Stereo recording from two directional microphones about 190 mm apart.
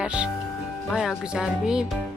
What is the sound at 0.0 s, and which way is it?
A woman's voice, 5° right (ahead or behind).